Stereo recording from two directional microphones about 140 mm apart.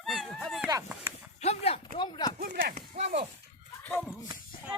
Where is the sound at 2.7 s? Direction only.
55° right (ahead or behind).